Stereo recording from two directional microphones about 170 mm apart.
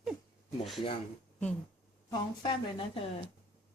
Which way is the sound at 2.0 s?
25° left (ahead or behind).